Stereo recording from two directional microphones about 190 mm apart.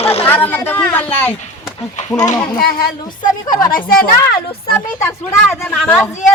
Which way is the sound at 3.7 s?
50° left (ahead or behind).